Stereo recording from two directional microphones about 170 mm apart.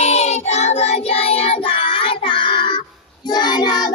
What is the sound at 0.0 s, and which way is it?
Music, 40° left (ahead or behind).